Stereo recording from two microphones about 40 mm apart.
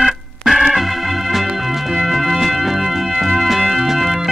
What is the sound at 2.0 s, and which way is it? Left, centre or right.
Music, centre.